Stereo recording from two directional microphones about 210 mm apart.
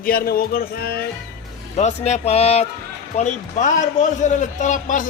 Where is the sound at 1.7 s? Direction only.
30° left (ahead or behind).